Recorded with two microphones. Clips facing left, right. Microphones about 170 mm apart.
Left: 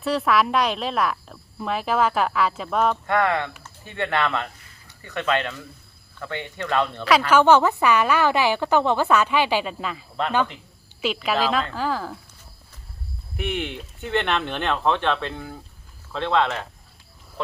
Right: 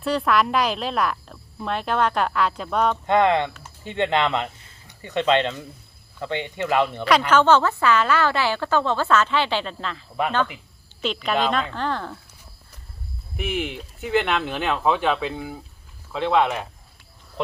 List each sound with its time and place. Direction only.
0.0 s speech: centre (ahead or behind)
3.1 s speech: 20° right (ahead or behind)
7.3 s a woman's voice: 10° left (ahead or behind)
10.2 s speech: 10° right (ahead or behind)
11.0 s speech: 5° left (ahead or behind)
13.3 s speech: centre (ahead or behind)